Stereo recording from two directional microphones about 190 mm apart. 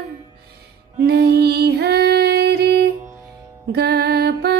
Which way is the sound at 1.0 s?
60° right (ahead or behind).